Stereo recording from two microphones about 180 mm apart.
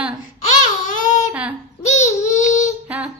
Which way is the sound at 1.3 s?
5° right (ahead or behind).